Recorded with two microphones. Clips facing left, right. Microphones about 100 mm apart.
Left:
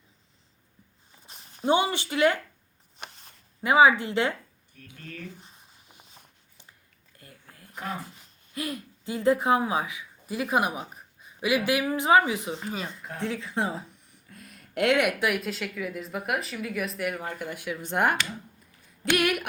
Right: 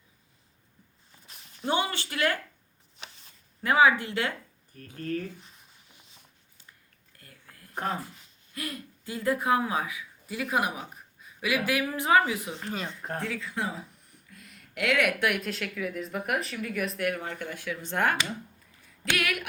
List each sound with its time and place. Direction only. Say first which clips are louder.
1.3 s walk: left 5 dB; 30° left (ahead or behind)
1.7 s speech: left 5 dB; 20° left (ahead or behind)
3.0 s a sound: left 4 dB; 55° left (ahead or behind)
3.6 s speech: left 3 dB; 15° left (ahead or behind)
4.7 s speech: right 11 dB; 40° right (ahead or behind)
7.2 s a sound: left 3 dB; 25° left (ahead or behind)
8.5 s speech: left 4 dB; 20° left (ahead or behind)
12.5 s speech: left 1 dB; 5° left (ahead or behind)
13.0 s speech: right 4 dB; 45° right (ahead or behind)
13.2 s speech: left 6 dB; 25° left (ahead or behind)
14.3 s a sound: left 4 dB; 35° left (ahead or behind)
15.2 s speech: left 1 dB; centre (ahead or behind); by 19.5 s 25° left (ahead or behind)